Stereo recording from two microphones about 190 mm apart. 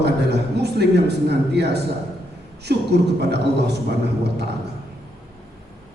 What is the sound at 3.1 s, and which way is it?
Speech, 60° right (ahead or behind).